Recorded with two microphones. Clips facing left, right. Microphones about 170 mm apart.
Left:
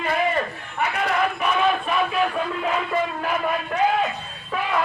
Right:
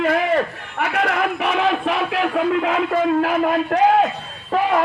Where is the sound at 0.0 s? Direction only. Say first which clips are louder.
Right 5 dB; 80° right.